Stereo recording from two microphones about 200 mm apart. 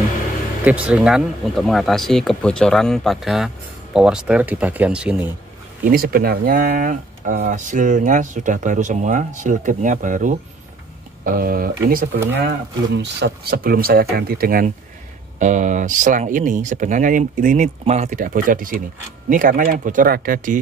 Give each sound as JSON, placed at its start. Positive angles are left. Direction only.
{"t": 0.7, "sound": "speech", "side_deg": -5}
{"t": 5.9, "sound": "speech", "side_deg": -45}
{"t": 12.4, "sound": "speech", "side_deg": -60}